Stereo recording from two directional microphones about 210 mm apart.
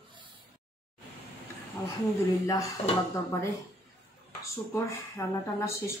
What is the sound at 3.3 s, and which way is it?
Speech, 15° left (ahead or behind).